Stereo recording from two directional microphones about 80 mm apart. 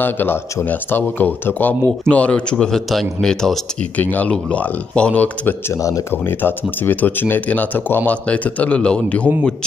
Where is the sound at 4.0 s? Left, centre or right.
Centre.